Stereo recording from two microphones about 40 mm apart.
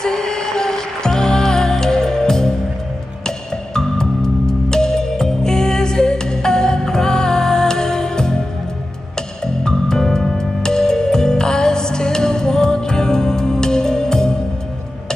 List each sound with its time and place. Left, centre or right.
0.0 s music: centre
9.6 s music: centre